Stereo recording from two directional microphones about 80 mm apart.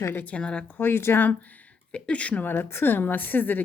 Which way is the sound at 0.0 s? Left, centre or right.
Left.